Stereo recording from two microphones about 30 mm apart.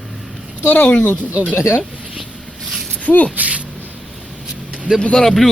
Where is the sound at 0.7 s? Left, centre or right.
Left.